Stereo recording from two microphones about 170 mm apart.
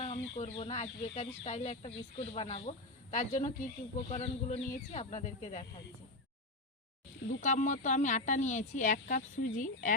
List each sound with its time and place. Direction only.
0.0 s speech: 40° left (ahead or behind)
7.4 s speech: 45° left (ahead or behind)